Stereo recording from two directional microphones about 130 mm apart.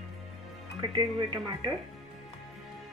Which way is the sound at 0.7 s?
35° right (ahead or behind).